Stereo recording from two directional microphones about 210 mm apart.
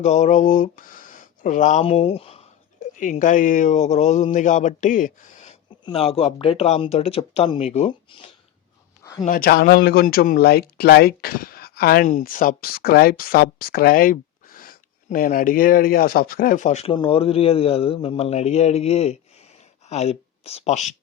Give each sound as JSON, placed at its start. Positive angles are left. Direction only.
{"t": 0.0, "sound": "speech", "side_deg": 35}
{"t": 9.2, "sound": "speech", "side_deg": 45}